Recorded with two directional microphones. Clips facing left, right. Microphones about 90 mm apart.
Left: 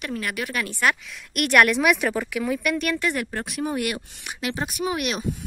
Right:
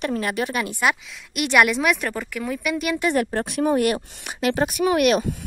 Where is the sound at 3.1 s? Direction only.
40° right (ahead or behind); by 5.4 s 55° right (ahead or behind).